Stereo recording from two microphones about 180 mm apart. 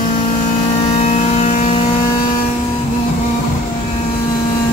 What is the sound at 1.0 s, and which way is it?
Vehicle, 35° left (ahead or behind).